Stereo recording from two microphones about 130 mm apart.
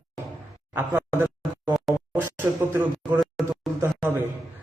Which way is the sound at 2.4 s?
15° right (ahead or behind).